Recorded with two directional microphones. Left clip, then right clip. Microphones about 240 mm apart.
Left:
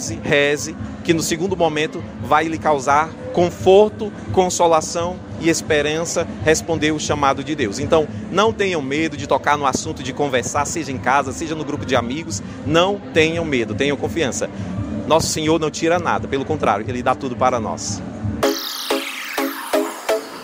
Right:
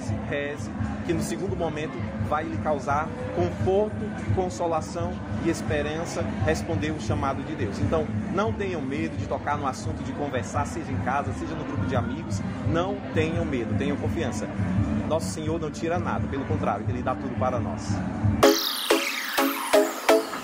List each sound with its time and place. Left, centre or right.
0.3 s speech: left
18.4 s music: centre